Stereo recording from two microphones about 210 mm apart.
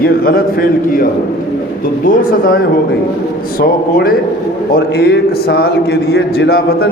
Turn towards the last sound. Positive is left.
turn(degrees=50)  # may be behind; listen again after turning